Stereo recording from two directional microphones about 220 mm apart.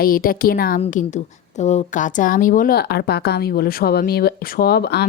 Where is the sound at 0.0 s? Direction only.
40° left (ahead or behind).